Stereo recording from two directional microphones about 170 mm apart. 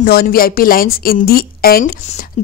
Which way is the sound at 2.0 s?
45° left (ahead or behind).